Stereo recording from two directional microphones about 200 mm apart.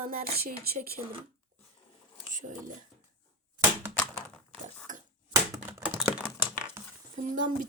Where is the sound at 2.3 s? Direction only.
40° right (ahead or behind).